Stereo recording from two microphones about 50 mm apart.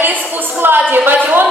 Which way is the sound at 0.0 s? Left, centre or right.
Right.